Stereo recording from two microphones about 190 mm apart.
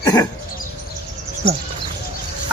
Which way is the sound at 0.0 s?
20° left (ahead or behind).